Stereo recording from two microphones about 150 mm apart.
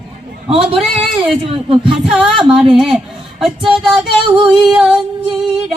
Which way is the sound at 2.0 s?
5° right (ahead or behind).